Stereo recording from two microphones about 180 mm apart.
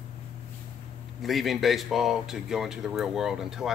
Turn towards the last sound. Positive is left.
turn(degrees=0)  # may be behind; listen again after turning